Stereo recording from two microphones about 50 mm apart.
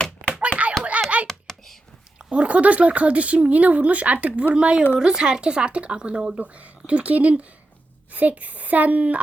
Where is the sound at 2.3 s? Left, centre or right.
Right.